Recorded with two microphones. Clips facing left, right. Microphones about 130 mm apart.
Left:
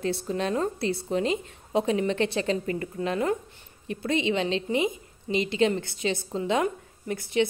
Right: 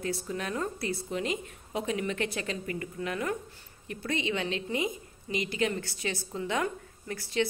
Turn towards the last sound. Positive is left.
turn(degrees=20)  # may be behind; listen again after turning